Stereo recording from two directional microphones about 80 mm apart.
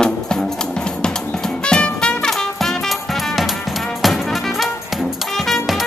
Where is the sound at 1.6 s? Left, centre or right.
Centre.